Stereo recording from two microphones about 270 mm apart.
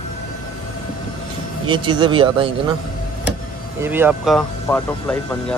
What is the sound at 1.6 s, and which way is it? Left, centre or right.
A man's voice, centre.